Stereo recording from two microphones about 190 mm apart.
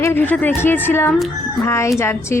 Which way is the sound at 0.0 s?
10° left (ahead or behind).